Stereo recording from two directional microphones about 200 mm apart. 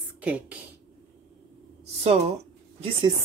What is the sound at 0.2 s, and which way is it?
Speech, 5° right (ahead or behind).